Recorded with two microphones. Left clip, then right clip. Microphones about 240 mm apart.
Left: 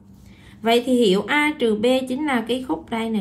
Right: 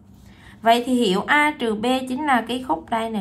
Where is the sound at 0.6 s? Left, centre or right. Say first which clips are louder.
Even; centre.